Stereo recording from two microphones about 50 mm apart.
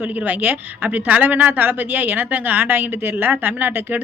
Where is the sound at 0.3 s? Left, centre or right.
Right.